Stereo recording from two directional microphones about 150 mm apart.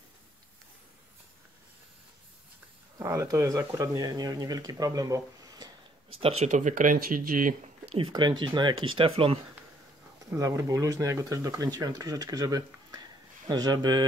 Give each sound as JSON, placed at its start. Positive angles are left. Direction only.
{"t": 3.0, "sound": "speech", "side_deg": -20}
{"t": 6.2, "sound": "speech", "side_deg": -50}
{"t": 8.1, "sound": "speech", "side_deg": -30}
{"t": 10.3, "sound": "speech", "side_deg": -20}